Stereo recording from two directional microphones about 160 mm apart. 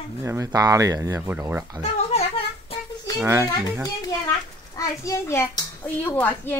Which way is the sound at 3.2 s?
15° right (ahead or behind).